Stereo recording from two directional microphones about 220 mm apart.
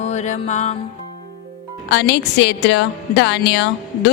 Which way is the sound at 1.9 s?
50° left (ahead or behind).